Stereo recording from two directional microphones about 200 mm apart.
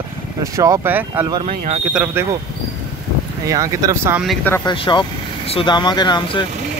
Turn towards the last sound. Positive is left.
turn(degrees=20)  # may be behind; listen again after turning